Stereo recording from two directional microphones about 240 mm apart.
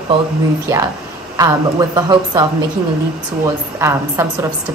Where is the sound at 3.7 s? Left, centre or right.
Centre.